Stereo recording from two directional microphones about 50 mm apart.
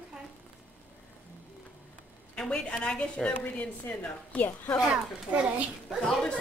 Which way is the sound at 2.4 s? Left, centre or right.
Left.